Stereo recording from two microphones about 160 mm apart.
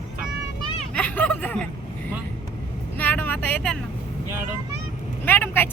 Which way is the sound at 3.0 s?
10° left (ahead or behind).